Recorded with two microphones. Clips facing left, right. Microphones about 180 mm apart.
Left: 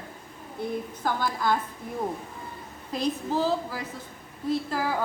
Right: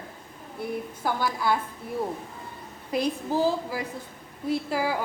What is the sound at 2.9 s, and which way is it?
A woman's voice, 10° right (ahead or behind).